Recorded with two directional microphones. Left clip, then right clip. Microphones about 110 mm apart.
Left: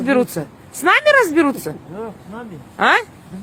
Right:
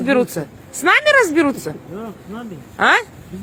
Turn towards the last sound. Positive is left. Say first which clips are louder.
# even
turn(degrees=35)  # may be behind; listen again after turning